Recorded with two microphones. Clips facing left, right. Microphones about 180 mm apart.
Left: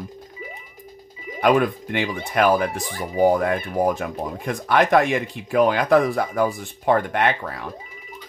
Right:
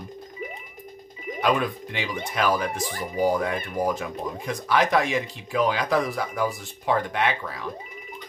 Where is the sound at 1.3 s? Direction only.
50° left (ahead or behind).